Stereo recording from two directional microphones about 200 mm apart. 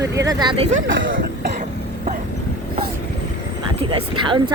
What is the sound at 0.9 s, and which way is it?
Speech, 70° right (ahead or behind).